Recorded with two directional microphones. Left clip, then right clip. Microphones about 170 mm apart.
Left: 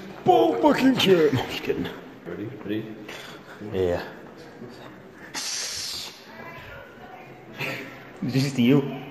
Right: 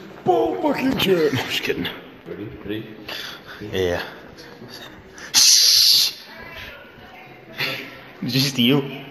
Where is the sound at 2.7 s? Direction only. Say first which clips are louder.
Right 1 dB; 40° right (ahead or behind).